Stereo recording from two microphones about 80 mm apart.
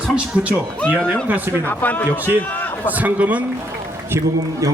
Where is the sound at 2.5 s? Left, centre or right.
Left.